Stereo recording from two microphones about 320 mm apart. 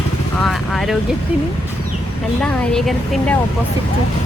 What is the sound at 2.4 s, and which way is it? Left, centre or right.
Speech, centre.